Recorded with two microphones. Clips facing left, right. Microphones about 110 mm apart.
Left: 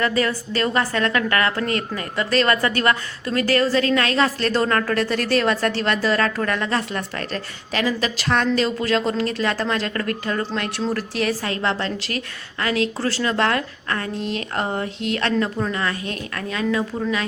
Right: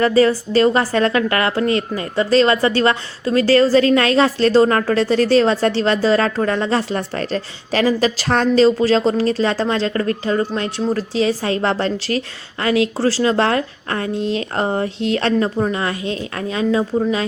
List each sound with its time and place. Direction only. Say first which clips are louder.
0.2 s a woman's voice: right 8 dB; 30° right (ahead or behind)
5.1 s a woman's voice: right 9 dB; 55° left (ahead or behind)
5.4 s a woman's voice: right 5 dB; 30° right (ahead or behind)